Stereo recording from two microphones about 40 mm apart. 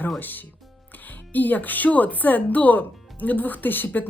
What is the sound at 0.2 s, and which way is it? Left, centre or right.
Speech, left.